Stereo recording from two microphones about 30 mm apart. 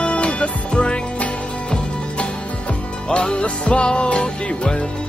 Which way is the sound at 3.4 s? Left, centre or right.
Left.